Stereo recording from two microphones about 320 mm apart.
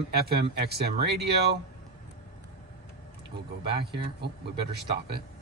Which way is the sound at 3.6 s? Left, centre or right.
Centre.